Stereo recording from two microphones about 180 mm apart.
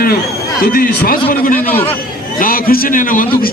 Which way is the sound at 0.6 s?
55° left (ahead or behind).